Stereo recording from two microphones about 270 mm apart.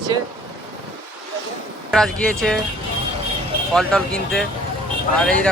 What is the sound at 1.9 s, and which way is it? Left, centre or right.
Speech, centre.